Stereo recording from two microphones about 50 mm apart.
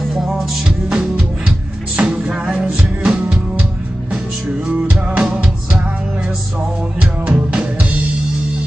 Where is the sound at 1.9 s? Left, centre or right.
Centre.